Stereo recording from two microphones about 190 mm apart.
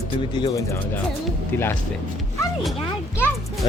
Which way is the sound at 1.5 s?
10° left (ahead or behind).